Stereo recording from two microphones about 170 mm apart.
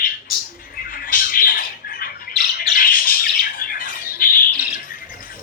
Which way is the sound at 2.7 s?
55° left (ahead or behind).